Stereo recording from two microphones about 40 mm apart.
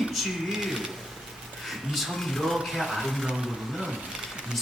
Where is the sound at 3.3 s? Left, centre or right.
Centre.